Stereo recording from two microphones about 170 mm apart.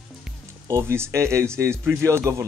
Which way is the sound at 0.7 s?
15° right (ahead or behind).